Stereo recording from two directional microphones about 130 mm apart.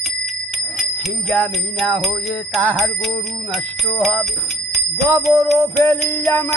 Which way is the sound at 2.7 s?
Centre (ahead or behind).